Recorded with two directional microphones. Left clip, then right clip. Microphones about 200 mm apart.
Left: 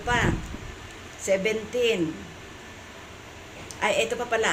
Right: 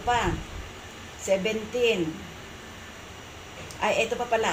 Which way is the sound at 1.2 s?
35° left (ahead or behind).